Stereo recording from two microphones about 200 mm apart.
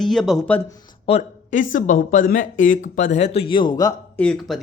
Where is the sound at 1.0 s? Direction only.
35° left (ahead or behind).